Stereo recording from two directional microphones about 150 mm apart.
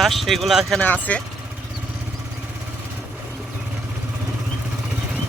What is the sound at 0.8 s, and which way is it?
Speech, 10° left (ahead or behind).